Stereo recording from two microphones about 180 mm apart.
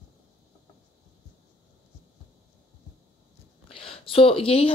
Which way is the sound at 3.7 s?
30° left (ahead or behind).